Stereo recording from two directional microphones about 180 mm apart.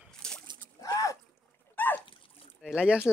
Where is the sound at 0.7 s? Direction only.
20° left (ahead or behind).